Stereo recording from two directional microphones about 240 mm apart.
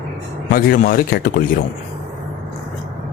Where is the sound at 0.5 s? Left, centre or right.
Left.